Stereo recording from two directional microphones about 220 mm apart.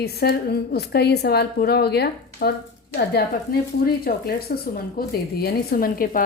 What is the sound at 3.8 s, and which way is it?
Speech, 45° left (ahead or behind).